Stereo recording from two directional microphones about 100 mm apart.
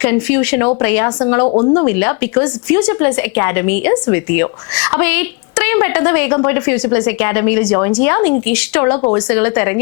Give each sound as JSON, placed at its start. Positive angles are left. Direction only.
{"t": 0.0, "sound": "speech", "side_deg": 20}
{"t": 1.5, "sound": "speech", "side_deg": 40}
{"t": 1.7, "sound": "speech", "side_deg": 25}